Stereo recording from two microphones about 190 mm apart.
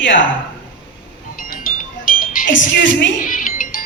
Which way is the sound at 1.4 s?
45° left (ahead or behind).